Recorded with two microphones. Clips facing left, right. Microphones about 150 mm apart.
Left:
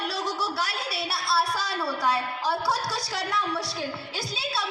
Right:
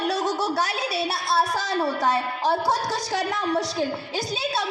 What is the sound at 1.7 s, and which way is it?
A woman's voice, 45° right (ahead or behind).